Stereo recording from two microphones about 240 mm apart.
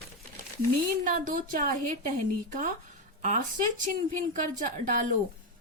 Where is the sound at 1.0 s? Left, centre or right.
Right.